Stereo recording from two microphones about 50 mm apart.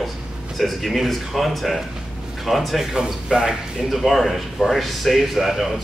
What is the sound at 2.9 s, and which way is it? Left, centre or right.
Speech, centre.